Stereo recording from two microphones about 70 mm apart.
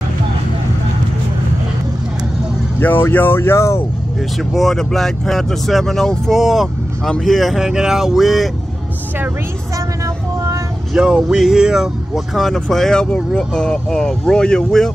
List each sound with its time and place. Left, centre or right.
2.8 s speech: left
4.4 s speech: centre
11.0 s a sound: centre
12.4 s speech: centre